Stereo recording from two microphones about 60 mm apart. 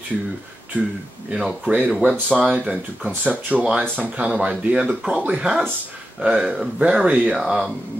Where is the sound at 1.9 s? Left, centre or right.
Centre.